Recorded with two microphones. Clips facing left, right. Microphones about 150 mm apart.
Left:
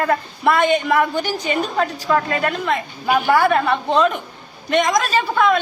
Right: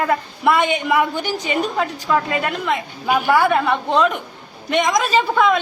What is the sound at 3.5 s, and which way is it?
A man's voice, 10° right (ahead or behind).